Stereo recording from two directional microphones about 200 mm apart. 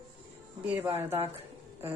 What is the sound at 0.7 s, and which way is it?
Speech, 10° right (ahead or behind).